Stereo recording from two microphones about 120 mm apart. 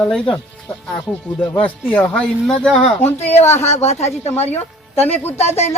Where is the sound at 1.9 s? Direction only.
10° left (ahead or behind).